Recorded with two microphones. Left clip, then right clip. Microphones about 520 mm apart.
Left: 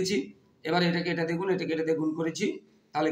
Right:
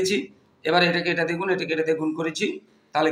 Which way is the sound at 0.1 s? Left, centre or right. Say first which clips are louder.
Right 5 dB; left.